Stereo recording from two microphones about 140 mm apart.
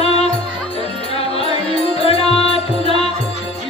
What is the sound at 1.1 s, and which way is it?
Music, 45° left (ahead or behind).